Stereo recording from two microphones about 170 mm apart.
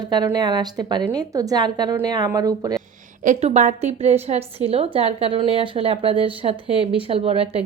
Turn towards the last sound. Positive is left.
turn(degrees=-35)  # may be behind; listen again after turning